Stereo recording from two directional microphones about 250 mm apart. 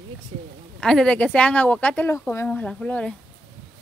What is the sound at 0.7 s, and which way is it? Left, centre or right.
Speech, centre.